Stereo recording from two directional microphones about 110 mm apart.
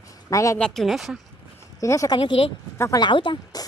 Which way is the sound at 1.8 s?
30° left (ahead or behind).